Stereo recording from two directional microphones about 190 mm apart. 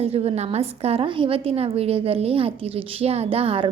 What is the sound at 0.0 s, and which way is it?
A woman's voice, 30° right (ahead or behind).